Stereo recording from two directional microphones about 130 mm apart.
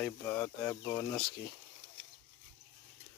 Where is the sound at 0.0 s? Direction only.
15° left (ahead or behind).